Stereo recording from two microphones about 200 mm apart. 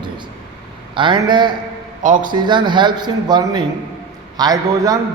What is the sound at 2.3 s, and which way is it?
A man's voice, 25° right (ahead or behind).